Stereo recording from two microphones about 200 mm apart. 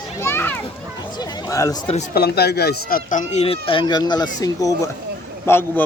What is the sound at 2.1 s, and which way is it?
Speech, 55° left (ahead or behind).